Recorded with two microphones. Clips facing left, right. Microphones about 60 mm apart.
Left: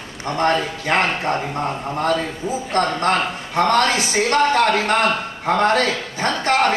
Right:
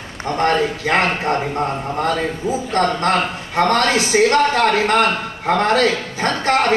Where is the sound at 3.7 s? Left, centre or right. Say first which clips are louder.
Right 2 dB; right.